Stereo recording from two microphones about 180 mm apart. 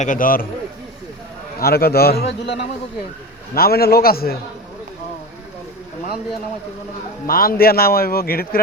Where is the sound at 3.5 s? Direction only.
55° left (ahead or behind).